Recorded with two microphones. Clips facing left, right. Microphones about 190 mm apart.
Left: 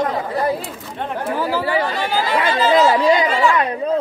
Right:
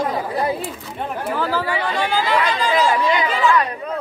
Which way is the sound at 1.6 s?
35° left (ahead or behind).